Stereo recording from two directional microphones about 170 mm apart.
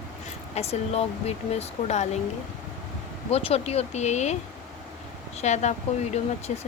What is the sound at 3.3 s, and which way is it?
Speech, 35° left (ahead or behind).